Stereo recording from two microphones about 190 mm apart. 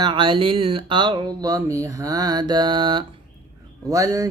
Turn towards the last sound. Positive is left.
turn(degrees=-15)  # may be behind; listen again after turning